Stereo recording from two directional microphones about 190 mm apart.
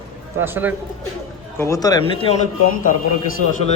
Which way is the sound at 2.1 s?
30° left (ahead or behind).